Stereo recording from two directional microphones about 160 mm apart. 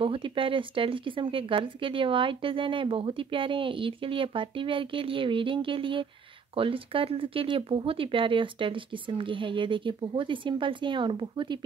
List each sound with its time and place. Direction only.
0.0 s speech: 35° right (ahead or behind)